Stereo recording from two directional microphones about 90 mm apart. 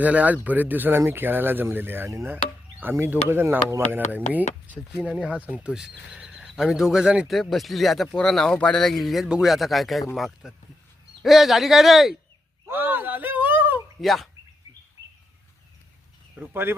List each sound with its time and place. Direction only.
0.0 s speech: 15° right (ahead or behind)
12.6 s a sound: 25° right (ahead or behind)
14.0 s speech: centre (ahead or behind)
16.4 s speech: 15° right (ahead or behind)